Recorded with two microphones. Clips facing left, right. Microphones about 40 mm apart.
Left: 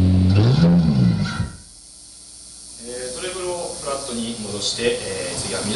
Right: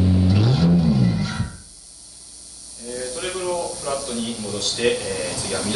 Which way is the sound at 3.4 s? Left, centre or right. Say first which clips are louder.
Right 1 dB; centre.